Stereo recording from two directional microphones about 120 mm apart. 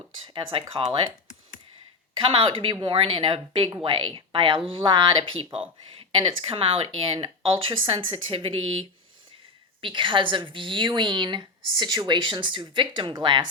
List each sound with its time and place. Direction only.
0.7 s a woman's voice: 45° right (ahead or behind)
2.1 s a woman's voice: 45° right (ahead or behind)
9.8 s a woman's voice: 45° right (ahead or behind)